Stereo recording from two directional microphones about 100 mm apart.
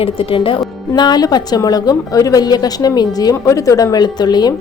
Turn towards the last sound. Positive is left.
turn(degrees=45)  # may be behind; listen again after turning